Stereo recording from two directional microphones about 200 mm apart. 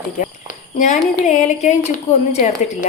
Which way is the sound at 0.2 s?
40° left (ahead or behind).